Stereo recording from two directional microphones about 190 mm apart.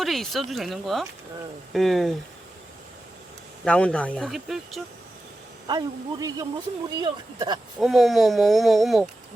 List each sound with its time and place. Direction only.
0.0 s speech: centre (ahead or behind)
3.6 s speech: 5° left (ahead or behind)
5.6 s speech: 20° right (ahead or behind)
7.8 s speech: centre (ahead or behind)